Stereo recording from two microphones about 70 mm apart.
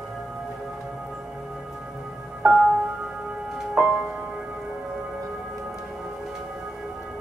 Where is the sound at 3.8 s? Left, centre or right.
Centre.